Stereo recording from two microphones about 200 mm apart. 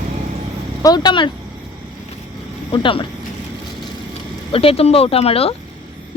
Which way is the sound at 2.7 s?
25° left (ahead or behind).